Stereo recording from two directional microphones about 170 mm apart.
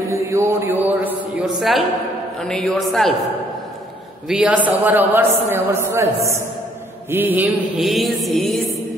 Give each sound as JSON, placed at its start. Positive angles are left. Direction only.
{"t": 0.1, "sound": "a sound", "side_deg": -15}
{"t": 2.4, "sound": "mantra", "side_deg": 0}
{"t": 4.3, "sound": "a man's voice", "side_deg": -5}
{"t": 7.1, "sound": "mantra", "side_deg": -10}